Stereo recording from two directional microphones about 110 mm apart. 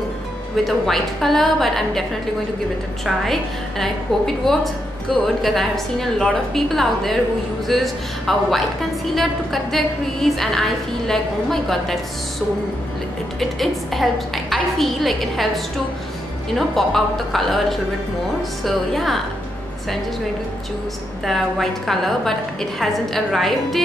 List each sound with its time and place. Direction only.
0.7 s a woman's voice: centre (ahead or behind)
3.3 s a woman's voice: 5° left (ahead or behind)
13.4 s a woman's voice: centre (ahead or behind)
21.3 s a woman's voice: centre (ahead or behind)